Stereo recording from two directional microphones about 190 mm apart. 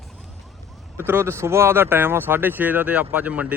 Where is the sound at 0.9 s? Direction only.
10° right (ahead or behind).